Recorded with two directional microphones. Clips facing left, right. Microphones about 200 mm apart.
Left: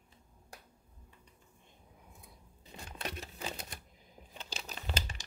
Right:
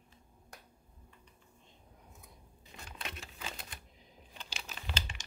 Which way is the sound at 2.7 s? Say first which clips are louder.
Left 4 dB; 40° left (ahead or behind).